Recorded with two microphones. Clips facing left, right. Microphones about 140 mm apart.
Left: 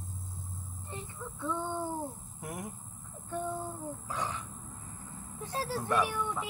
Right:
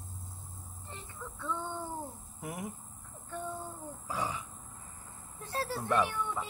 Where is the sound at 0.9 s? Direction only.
15° left (ahead or behind).